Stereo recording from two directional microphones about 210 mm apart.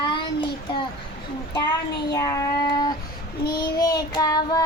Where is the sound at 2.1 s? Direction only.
15° left (ahead or behind).